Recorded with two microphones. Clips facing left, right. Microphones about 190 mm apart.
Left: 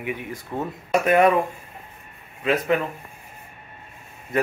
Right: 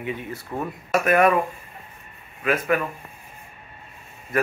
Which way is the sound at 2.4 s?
20° left (ahead or behind).